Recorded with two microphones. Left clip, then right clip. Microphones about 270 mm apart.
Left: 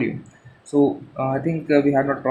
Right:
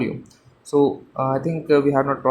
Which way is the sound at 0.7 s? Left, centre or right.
Centre.